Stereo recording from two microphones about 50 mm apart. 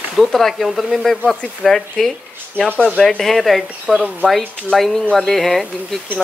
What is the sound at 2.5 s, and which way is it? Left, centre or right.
Speech, centre.